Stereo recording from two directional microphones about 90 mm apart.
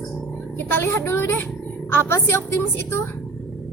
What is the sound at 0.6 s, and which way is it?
Speech, 25° left (ahead or behind).